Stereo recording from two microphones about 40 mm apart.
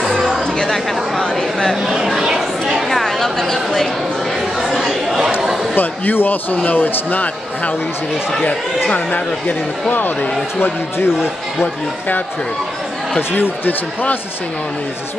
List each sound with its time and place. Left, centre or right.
2.0 s chatter: centre
2.9 s a sound: centre
4.6 s speech: centre
5.8 s a man's voice: left
8.9 s a man's voice: left
13.3 s a man's voice: left